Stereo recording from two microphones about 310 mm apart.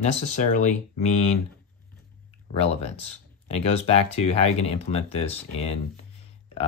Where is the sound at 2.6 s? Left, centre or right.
Centre.